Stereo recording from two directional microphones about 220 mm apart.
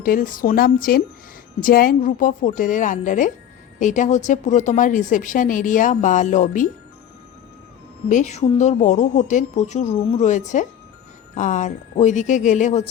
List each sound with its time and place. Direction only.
0.0 s speech: 40° left (ahead or behind)
8.1 s speech: 30° left (ahead or behind)